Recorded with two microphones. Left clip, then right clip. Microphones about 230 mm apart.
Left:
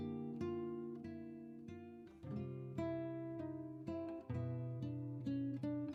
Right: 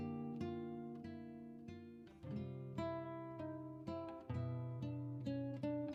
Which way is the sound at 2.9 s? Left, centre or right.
Right.